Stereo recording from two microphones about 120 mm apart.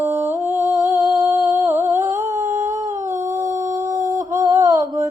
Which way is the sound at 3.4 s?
90° right.